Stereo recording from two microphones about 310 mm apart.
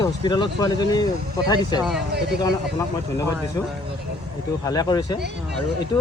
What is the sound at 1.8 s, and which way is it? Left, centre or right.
Speech, centre.